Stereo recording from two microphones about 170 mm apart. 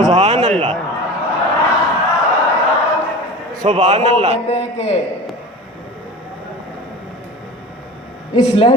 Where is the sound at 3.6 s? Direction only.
40° right (ahead or behind).